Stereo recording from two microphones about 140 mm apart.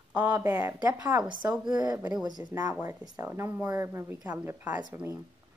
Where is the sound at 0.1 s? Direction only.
10° right (ahead or behind).